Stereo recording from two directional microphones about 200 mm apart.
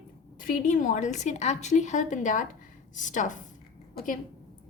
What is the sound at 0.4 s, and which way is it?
A woman's voice, 40° left (ahead or behind).